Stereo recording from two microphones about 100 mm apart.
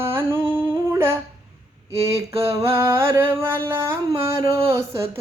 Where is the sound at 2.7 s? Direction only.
25° right (ahead or behind).